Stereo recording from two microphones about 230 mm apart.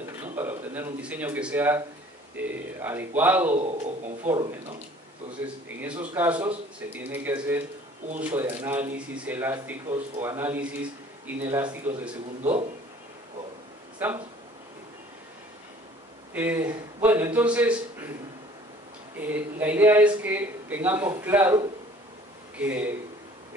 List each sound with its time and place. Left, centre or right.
0.4 s speech: centre
3.5 s a man's voice: right
5.8 s speech: centre
13.9 s speech: centre
16.3 s speech: centre
19.1 s speech: centre